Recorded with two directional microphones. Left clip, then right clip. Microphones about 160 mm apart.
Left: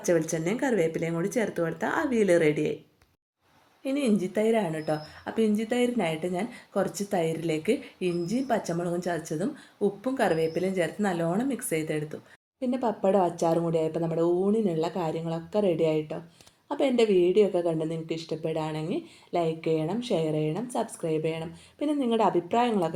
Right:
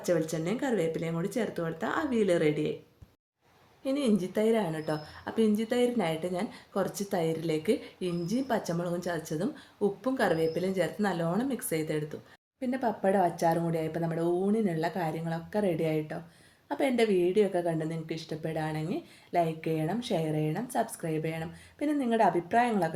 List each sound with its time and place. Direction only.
0.0 s speech: 35° left (ahead or behind)
3.8 s a woman's voice: 20° left (ahead or behind)
12.7 s a woman's voice: 10° left (ahead or behind)
22.2 s a woman's voice: 35° right (ahead or behind)